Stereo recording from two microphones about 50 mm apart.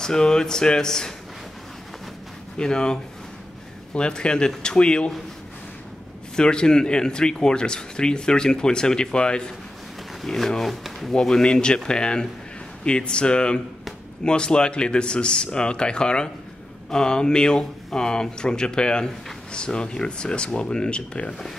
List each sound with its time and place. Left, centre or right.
0.0 s speech: centre
2.6 s speech: centre
6.3 s speech: centre
10.2 s speech: centre
11.1 s speech: centre